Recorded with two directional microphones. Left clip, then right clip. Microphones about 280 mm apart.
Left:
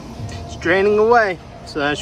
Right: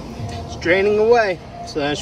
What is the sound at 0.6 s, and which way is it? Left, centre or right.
Speech, centre.